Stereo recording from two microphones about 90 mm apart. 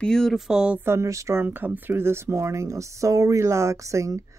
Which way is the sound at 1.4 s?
20° right (ahead or behind).